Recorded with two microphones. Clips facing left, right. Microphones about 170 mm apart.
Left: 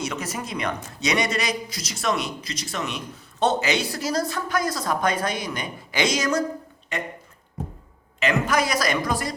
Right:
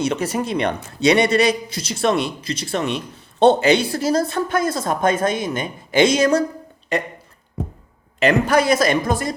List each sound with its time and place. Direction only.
0.0 s a man's voice: 30° right (ahead or behind)
6.9 s speech: 35° right (ahead or behind)
8.2 s a man's voice: 35° right (ahead or behind)